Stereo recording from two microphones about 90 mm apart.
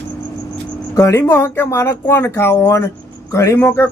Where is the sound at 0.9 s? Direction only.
35° left (ahead or behind).